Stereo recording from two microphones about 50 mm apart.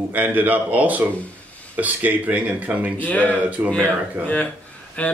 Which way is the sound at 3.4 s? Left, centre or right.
Right.